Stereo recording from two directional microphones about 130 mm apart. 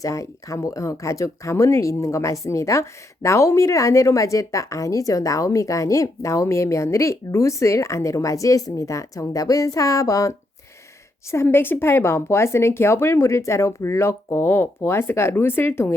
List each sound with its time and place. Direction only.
0.0 s a woman's voice: 25° left (ahead or behind)